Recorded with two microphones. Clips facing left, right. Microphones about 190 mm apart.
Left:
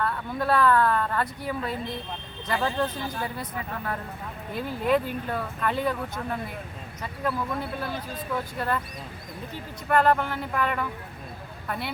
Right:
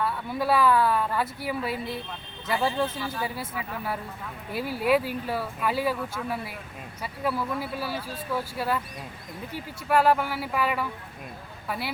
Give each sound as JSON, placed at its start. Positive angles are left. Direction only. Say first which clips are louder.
{"t": 0.0, "sound": "speech", "louder": "even", "side_deg": -5}
{"t": 9.9, "sound": "speech", "louder": "even", "side_deg": -5}